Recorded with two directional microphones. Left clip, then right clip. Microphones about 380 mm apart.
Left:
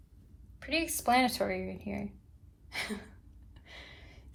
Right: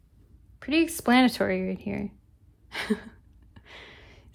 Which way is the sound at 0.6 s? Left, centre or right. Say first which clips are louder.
Right 6 dB; centre.